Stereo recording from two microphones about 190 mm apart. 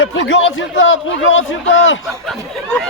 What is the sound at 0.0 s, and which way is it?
A man's voice, 85° left.